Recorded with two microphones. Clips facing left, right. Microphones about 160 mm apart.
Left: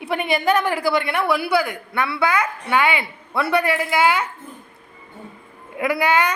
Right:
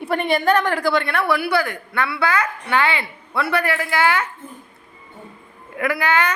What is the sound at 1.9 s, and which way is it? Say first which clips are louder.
A woman's voice: left 1 dB; 25° left (ahead or behind).